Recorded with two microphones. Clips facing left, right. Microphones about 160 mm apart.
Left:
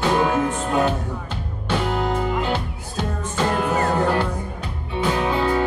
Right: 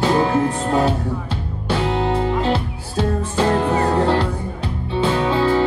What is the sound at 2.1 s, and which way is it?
Music, 30° right (ahead or behind).